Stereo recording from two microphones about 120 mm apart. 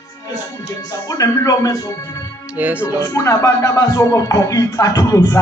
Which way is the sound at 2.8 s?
25° left (ahead or behind).